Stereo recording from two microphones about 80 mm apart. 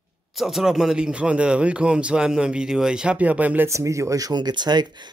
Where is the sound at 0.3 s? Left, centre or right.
Centre.